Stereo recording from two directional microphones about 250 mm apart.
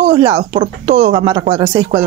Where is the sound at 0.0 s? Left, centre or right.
Right.